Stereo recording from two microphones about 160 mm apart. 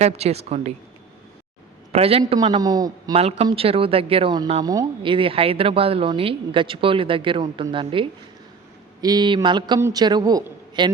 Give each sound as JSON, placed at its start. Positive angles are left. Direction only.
{"t": 0.0, "sound": "speech", "side_deg": -40}
{"t": 1.9, "sound": "a man's voice", "side_deg": -40}
{"t": 3.2, "sound": "a man's voice", "side_deg": -40}